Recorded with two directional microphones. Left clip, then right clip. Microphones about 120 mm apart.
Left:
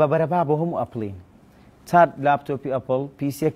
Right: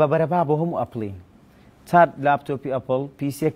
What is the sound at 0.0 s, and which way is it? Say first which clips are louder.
Speech: even; centre (ahead or behind).